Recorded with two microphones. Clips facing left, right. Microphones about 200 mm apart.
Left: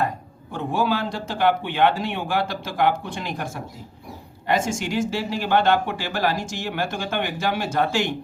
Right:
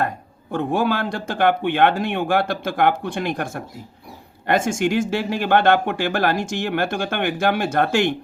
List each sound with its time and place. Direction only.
0.5 s speech: 55° right (ahead or behind)